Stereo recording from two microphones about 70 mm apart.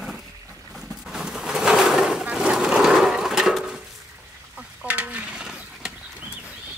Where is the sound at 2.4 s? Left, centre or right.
Centre.